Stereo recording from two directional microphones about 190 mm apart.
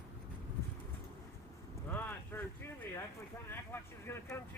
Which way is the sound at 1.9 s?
10° left (ahead or behind).